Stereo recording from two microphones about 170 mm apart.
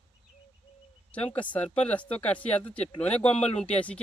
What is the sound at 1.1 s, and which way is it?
Speech, 10° left (ahead or behind).